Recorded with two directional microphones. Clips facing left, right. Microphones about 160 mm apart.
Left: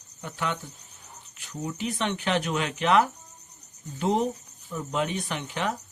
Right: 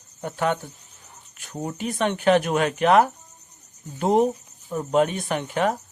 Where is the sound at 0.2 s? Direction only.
50° right (ahead or behind).